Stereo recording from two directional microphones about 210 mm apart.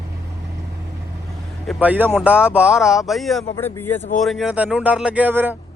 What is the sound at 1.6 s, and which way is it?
A man's voice, 5° right (ahead or behind).